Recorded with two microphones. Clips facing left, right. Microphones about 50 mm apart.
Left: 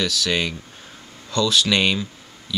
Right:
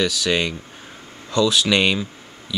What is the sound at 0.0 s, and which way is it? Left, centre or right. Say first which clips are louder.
Speech: right 2 dB; centre.